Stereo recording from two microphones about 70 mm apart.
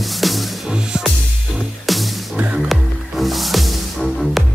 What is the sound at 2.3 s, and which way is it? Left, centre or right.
Music, centre.